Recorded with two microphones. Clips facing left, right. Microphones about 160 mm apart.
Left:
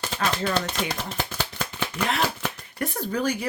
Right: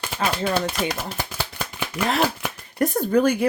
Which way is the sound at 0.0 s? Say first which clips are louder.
Right 2 dB; 10° right (ahead or behind).